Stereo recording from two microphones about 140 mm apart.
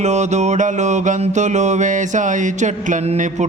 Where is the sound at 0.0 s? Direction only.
55° right (ahead or behind).